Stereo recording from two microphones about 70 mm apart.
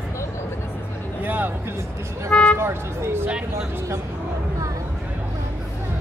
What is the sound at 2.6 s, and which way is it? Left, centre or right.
Speech, right.